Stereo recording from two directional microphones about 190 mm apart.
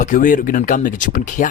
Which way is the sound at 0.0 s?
45° left (ahead or behind).